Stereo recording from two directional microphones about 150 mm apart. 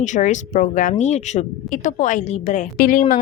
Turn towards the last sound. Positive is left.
turn(degrees=65)  # may be behind; listen again after turning